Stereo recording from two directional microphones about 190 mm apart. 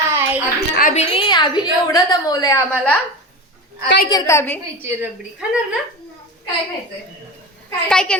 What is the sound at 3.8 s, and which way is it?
Speech, 60° left (ahead or behind).